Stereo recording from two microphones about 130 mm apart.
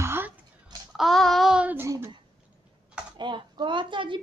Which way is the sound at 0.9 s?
Centre (ahead or behind).